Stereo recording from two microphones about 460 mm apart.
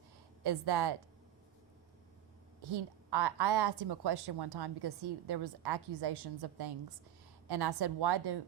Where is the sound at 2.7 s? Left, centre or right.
Right.